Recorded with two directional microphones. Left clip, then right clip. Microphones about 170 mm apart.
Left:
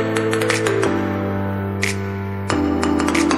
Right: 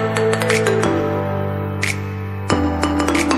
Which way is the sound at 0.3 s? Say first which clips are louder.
Right 2 dB; centre (ahead or behind).